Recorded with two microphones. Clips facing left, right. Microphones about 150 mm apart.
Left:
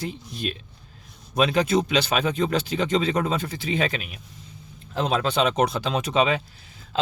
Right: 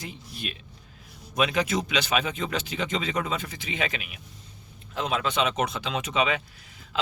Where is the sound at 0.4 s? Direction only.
35° left (ahead or behind).